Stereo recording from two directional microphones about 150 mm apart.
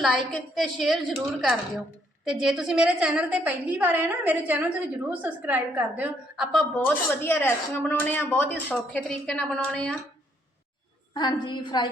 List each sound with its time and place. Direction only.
0.0 s a woman's voice: centre (ahead or behind)
6.7 s speech: 15° left (ahead or behind)
11.1 s a woman's voice: 30° left (ahead or behind)